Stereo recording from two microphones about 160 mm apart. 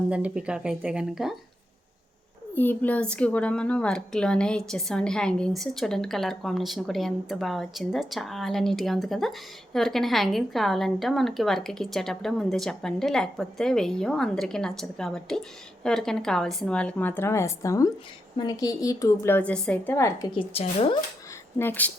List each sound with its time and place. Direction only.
0.1 s a woman's voice: 10° right (ahead or behind)
2.6 s a woman's voice: 10° left (ahead or behind)
20.5 s speech: 35° left (ahead or behind)
21.6 s speech: 10° left (ahead or behind)